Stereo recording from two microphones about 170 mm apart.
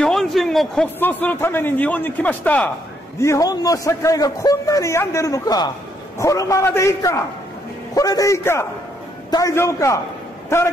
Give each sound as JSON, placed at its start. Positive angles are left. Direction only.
{"t": 0.0, "sound": "a sound", "side_deg": 0}
{"t": 0.9, "sound": "a man's voice", "side_deg": 10}
{"t": 3.2, "sound": "a man's voice", "side_deg": 20}